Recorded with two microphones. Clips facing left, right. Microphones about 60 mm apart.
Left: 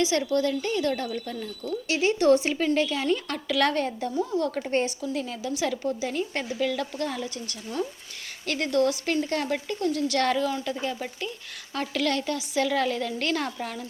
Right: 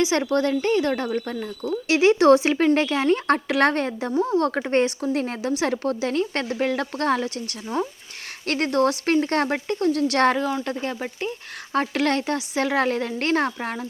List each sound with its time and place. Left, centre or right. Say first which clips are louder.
0.2 s speech: right 4 dB; right
1.9 s speech: right 6 dB; right
2.6 s speech: right 5 dB; right
3.1 s speech: right 7 dB; right
5.1 s speech: right 6 dB; right
6.6 s speech: right 3 dB; right
10.2 s speech: right 4 dB; right
10.7 s speech: right 2 dB; right